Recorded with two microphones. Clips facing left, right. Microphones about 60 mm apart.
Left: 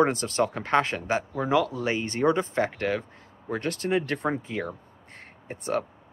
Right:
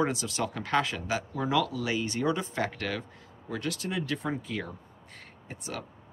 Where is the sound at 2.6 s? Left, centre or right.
Left.